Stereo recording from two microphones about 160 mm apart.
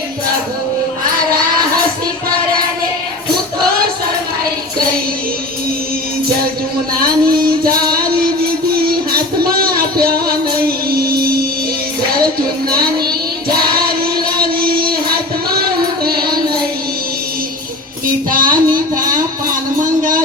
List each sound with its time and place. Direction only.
6.9 s music: 65° right (ahead or behind)
7.7 s music: 25° right (ahead or behind)
8.7 s music: 70° right (ahead or behind)
13.7 s choir: 70° right (ahead or behind)
14.3 s music: 65° right (ahead or behind)
18.3 s child singing: 60° right (ahead or behind)
20.0 s a sound: 60° right (ahead or behind)